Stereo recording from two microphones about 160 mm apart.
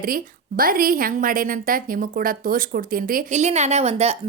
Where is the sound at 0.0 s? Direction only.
65° right (ahead or behind).